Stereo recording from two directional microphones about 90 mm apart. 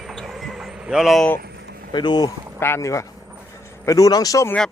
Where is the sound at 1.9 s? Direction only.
55° left (ahead or behind).